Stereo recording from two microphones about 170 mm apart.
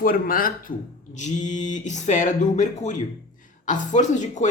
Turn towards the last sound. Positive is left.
turn(degrees=45)  # may be behind; listen again after turning